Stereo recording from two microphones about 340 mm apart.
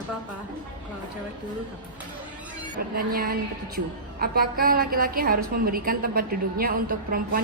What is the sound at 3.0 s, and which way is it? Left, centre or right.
A woman's voice, right.